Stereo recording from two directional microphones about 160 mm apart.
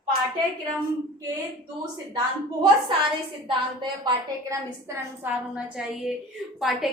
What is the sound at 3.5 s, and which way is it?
A woman's voice, 30° right (ahead or behind).